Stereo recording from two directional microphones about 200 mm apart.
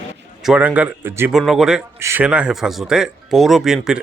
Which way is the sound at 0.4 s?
5° right (ahead or behind).